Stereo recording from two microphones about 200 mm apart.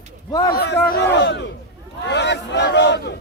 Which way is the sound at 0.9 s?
55° left (ahead or behind).